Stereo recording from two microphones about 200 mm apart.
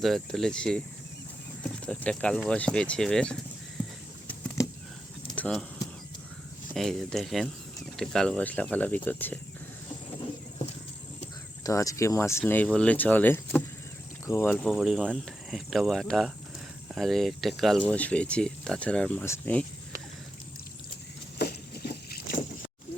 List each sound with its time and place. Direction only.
0.0 s speech: centre (ahead or behind)
5.3 s a sound: 5° left (ahead or behind)
6.7 s speech: centre (ahead or behind)
11.6 s speech: 15° left (ahead or behind)
21.3 s boat: 50° left (ahead or behind)